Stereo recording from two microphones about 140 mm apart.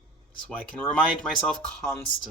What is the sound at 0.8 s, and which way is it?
Speech, 5° left (ahead or behind).